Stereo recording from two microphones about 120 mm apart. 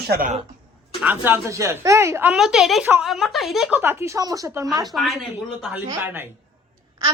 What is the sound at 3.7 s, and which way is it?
Speech, 20° right (ahead or behind).